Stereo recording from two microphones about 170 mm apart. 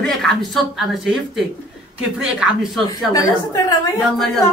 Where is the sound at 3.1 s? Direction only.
20° left (ahead or behind).